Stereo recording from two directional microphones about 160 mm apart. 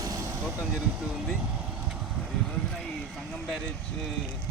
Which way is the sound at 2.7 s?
Centre (ahead or behind).